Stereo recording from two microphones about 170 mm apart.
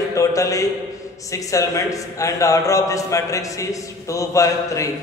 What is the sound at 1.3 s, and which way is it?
A man's voice, 20° left (ahead or behind).